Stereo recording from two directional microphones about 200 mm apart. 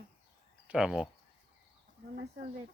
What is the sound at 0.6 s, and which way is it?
Speech, 5° right (ahead or behind).